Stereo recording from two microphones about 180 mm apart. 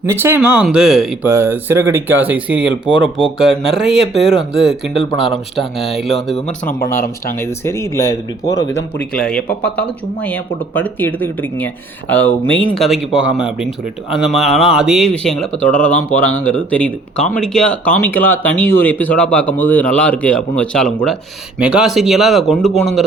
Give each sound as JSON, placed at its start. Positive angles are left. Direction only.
{"t": 0.0, "sound": "speech", "side_deg": -15}
{"t": 1.3, "sound": "speech", "side_deg": -15}
{"t": 6.9, "sound": "speech", "side_deg": 50}
{"t": 7.3, "sound": "speech", "side_deg": 15}
{"t": 9.1, "sound": "speech", "side_deg": 5}